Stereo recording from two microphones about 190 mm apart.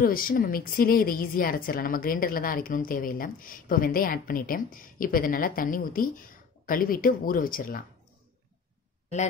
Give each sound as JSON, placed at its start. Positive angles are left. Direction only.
{"t": 0.0, "sound": "a woman's voice", "side_deg": 50}